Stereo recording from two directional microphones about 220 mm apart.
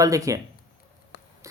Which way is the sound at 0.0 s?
15° right (ahead or behind).